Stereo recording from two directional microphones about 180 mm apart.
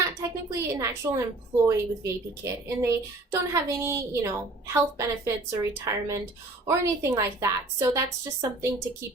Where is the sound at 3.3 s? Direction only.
15° right (ahead or behind).